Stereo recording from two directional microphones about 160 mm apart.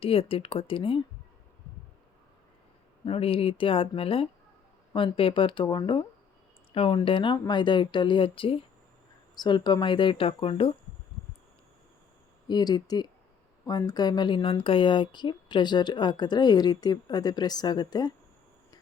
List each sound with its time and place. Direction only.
0.0 s speech: 35° left (ahead or behind)
3.0 s speech: 35° left (ahead or behind)
12.5 s speech: 25° left (ahead or behind)